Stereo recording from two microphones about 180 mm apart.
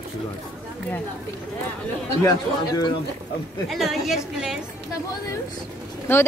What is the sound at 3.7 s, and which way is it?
Speech, centre (ahead or behind).